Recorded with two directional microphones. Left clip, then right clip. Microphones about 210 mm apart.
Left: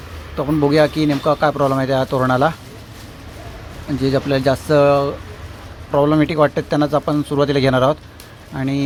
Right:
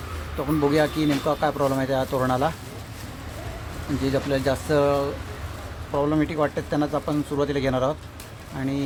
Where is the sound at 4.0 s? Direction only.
20° left (ahead or behind).